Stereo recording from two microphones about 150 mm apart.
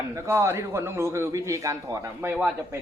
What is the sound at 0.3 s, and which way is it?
A man's voice, 15° right (ahead or behind).